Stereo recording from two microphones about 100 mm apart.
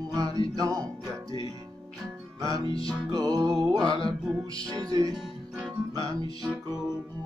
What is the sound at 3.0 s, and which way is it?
Music, 40° right (ahead or behind).